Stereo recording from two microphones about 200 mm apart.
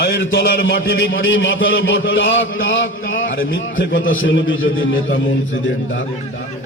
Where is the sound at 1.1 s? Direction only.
70° left (ahead or behind).